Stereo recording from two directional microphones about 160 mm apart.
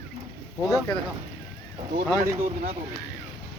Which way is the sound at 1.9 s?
60° right (ahead or behind).